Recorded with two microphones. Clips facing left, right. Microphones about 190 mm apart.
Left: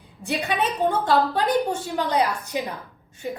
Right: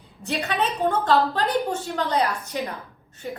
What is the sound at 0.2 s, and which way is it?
A woman's voice, 10° left (ahead or behind).